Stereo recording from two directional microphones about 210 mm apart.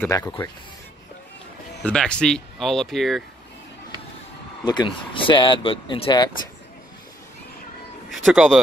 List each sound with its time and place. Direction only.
0.0 s speech: 15° left (ahead or behind)
1.8 s speech: 5° left (ahead or behind)
4.6 s speech: 20° left (ahead or behind)
8.1 s speech: centre (ahead or behind)